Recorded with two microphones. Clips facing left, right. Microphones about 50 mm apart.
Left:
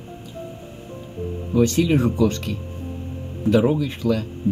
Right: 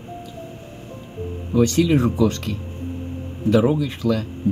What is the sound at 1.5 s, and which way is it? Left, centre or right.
Speech, centre.